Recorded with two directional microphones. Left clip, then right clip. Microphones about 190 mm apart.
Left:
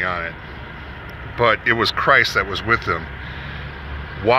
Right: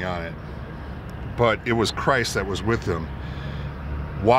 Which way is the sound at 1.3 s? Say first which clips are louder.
Left 5 dB; 15° right (ahead or behind).